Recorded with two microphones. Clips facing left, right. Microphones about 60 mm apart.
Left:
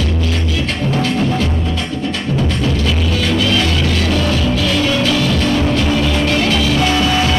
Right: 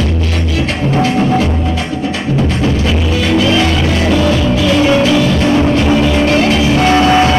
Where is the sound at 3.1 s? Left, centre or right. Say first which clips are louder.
Right 5 dB; right.